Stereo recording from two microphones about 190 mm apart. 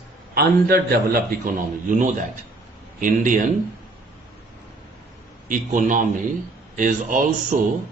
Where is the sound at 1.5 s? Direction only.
45° right (ahead or behind).